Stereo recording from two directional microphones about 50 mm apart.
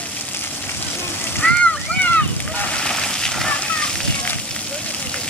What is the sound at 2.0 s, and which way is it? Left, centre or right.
Boat, left.